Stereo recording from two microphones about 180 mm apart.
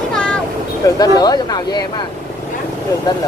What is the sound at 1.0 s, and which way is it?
Speech, 20° left (ahead or behind).